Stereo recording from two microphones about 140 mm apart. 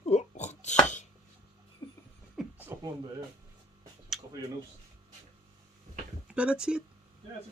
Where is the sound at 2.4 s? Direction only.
Centre (ahead or behind).